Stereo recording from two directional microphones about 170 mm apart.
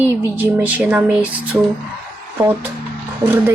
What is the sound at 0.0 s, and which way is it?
Speech, 10° right (ahead or behind).